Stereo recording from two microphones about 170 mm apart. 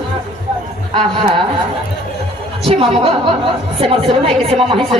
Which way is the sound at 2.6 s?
35° right (ahead or behind).